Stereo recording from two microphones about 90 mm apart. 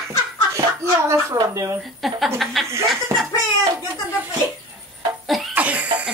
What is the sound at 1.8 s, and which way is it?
Speech, centre (ahead or behind).